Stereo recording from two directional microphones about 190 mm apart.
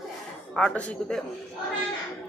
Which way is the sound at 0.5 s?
5° left (ahead or behind).